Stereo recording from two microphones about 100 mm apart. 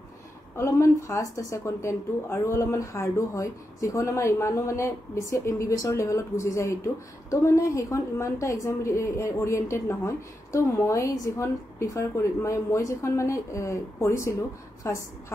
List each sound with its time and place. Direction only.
0.6 s a woman's voice: 30° left (ahead or behind)